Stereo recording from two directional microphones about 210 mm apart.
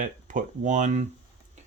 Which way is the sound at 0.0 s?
40° right (ahead or behind).